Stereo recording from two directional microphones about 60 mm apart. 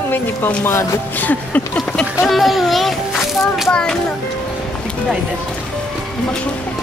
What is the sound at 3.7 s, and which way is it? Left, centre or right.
Speech, centre.